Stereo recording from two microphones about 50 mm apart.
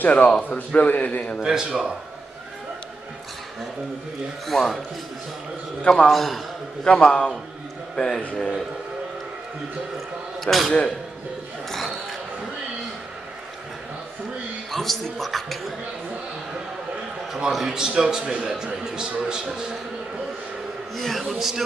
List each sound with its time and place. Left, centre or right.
0.0 s a man's voice: left
1.4 s a man's voice: centre
4.5 s a man's voice: centre
5.9 s a man's voice: centre
6.1 s a man's voice: centre
6.8 s a man's voice: centre
10.4 s a man's voice: centre
11.7 s a sound: centre
14.7 s a man's voice: centre
17.3 s a man's voice: centre
20.9 s a man's voice: centre